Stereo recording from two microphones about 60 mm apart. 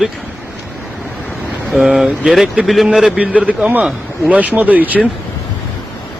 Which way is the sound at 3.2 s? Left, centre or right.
Right.